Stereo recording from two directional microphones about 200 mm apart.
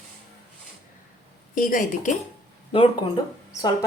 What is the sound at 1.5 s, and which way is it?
Speech, 45° left (ahead or behind).